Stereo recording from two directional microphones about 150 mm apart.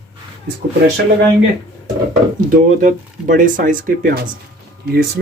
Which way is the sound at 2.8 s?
65° right (ahead or behind).